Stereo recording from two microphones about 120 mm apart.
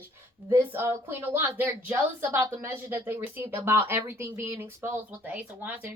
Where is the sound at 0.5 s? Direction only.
20° right (ahead or behind).